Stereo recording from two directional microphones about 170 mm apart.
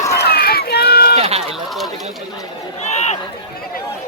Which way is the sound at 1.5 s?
Centre (ahead or behind).